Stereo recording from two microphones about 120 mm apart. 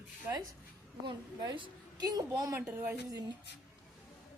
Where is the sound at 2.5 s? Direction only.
15° right (ahead or behind).